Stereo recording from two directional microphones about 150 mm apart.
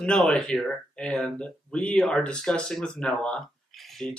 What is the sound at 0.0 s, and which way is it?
Speech, 5° left (ahead or behind).